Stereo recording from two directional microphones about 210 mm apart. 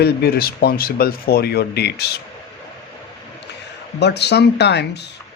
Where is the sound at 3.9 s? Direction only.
55° left (ahead or behind).